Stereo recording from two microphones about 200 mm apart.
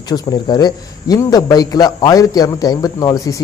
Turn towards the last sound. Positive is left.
turn(degrees=15)  # may be behind; listen again after turning